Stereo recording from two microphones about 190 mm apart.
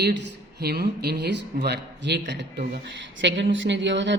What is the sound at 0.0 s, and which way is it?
A woman's voice, 65° right (ahead or behind).